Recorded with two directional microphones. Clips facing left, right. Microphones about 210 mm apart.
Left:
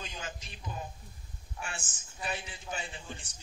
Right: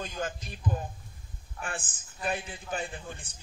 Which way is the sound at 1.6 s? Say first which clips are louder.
Right 5 dB; 55° right (ahead or behind).